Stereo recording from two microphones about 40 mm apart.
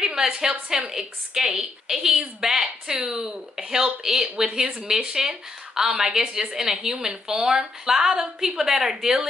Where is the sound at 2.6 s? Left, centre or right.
Right.